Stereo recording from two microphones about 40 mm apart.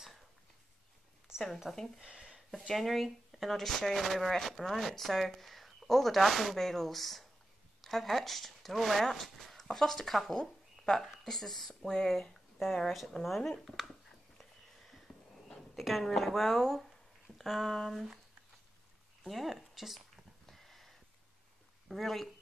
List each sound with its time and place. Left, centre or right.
1.7 s speech: centre
2.1 s a sound: centre
2.7 s speech: centre
11.9 s speech: centre
12.7 s speech: centre
14.4 s a sound: centre
15.7 s a woman's voice: centre
17.4 s speech: centre
19.2 s speech: centre
20.4 s a sound: centre
21.8 s speech: centre